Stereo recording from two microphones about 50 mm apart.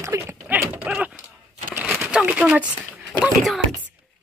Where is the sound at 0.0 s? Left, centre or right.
Right.